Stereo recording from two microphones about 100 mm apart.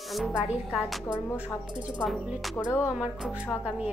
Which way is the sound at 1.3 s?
25° left (ahead or behind).